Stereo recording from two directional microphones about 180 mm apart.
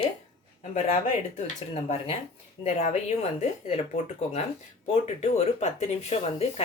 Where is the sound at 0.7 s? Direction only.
40° left (ahead or behind).